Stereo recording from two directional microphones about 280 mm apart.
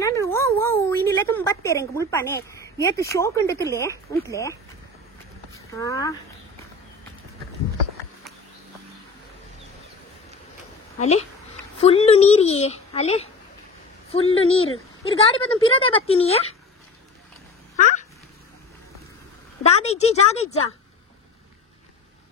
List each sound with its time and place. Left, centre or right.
0.0 s a sound: centre
5.5 s speech: centre
11.0 s a woman's voice: left
14.3 s a woman's voice: centre
17.7 s a sound: left
19.8 s a woman's voice: left